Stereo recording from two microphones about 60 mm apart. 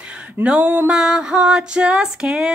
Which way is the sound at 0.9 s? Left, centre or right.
Centre.